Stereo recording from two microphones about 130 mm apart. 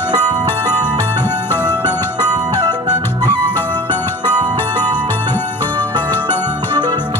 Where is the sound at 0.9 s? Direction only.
15° left (ahead or behind).